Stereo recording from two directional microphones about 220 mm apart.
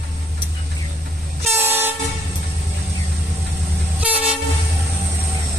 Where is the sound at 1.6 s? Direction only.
10° right (ahead or behind).